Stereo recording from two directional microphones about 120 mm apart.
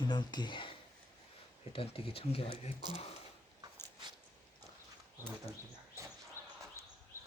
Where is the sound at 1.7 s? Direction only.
55° left (ahead or behind).